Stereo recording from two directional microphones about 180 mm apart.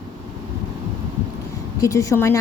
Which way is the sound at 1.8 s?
15° left (ahead or behind).